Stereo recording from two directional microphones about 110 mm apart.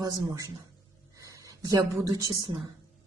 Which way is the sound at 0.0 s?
35° right (ahead or behind).